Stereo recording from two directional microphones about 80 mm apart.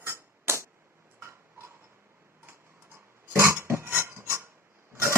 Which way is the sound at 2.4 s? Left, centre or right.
Right.